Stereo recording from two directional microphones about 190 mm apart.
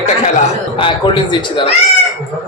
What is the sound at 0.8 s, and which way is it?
Speech, 25° left (ahead or behind).